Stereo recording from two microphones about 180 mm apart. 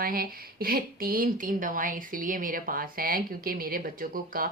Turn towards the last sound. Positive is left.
turn(degrees=-50)  # may be behind; listen again after turning